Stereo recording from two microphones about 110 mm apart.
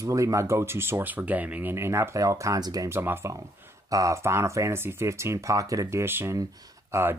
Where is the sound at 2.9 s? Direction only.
20° right (ahead or behind).